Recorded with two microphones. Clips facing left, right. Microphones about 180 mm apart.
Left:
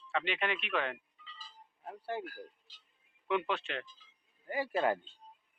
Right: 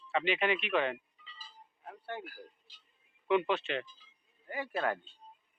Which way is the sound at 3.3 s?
Centre (ahead or behind).